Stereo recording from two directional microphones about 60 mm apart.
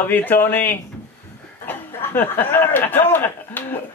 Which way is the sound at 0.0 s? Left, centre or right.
Left.